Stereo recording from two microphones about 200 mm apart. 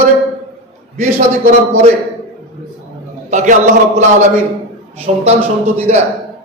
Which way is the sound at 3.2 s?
40° right (ahead or behind).